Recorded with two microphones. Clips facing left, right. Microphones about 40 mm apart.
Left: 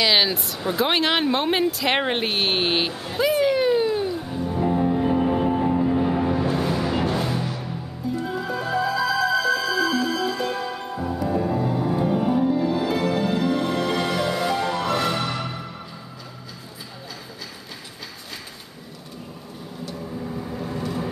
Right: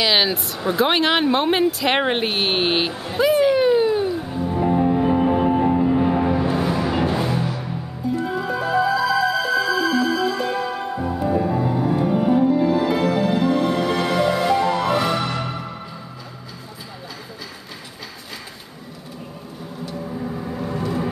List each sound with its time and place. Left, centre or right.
0.0 s a sound: centre
9.5 s music: centre
19.8 s vehicle: centre